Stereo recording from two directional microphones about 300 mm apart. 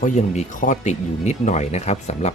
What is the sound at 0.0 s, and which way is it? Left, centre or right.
Speech, left.